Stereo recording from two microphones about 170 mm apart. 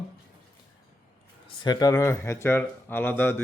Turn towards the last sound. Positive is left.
turn(degrees=10)  # may be behind; listen again after turning